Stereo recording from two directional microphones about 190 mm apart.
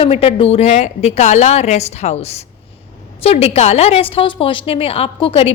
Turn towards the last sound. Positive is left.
turn(degrees=30)  # may be behind; listen again after turning